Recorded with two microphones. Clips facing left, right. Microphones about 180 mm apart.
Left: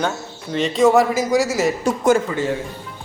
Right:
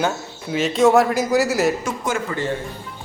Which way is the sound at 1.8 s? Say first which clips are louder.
Left 8 dB; 45° left (ahead or behind).